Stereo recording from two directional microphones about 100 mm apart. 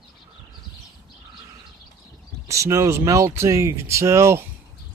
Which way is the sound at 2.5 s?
30° right (ahead or behind).